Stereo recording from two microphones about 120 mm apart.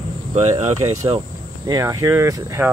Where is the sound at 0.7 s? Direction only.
25° right (ahead or behind).